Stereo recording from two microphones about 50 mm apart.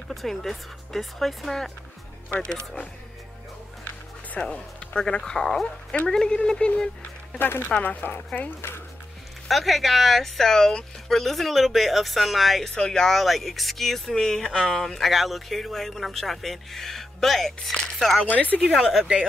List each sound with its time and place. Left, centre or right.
0.1 s speech: centre
2.4 s speech: centre
4.4 s speech: centre
7.3 s a woman's voice: left
9.5 s speech: centre
12.7 s speech: centre
15.0 s speech: centre
18.2 s speech: left
18.6 s speech: centre